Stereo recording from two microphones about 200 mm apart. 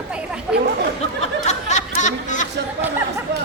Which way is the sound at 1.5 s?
35° left (ahead or behind).